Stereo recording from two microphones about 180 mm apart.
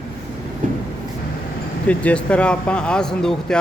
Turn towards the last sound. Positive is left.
turn(degrees=5)  # may be behind; listen again after turning